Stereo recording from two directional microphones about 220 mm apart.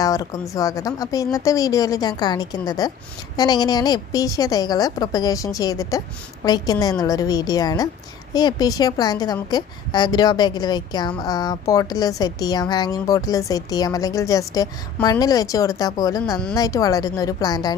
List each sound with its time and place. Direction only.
0.0 s a woman's voice: 15° left (ahead or behind)